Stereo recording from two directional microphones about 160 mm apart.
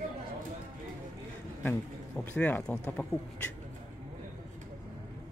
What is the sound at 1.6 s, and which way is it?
Speech, 10° left (ahead or behind).